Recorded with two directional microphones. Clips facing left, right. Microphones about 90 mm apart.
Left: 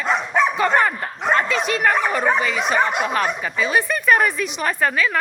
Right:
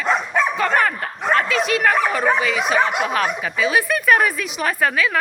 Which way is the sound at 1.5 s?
Centre (ahead or behind).